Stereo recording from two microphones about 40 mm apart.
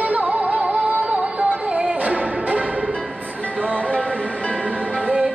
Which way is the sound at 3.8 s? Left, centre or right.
Left.